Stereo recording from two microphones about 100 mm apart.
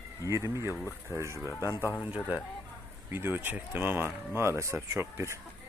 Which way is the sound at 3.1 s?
20° right (ahead or behind).